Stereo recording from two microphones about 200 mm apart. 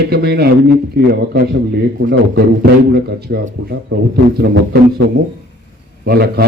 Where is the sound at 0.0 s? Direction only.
50° right (ahead or behind).